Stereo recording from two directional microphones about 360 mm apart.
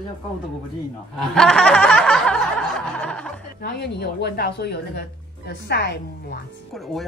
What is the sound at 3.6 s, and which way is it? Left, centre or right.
A woman's voice, left.